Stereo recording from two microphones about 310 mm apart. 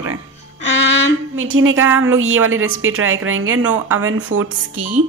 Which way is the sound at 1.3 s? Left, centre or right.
Right.